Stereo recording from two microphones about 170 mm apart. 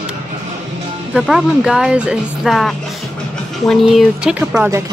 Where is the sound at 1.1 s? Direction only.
5° right (ahead or behind).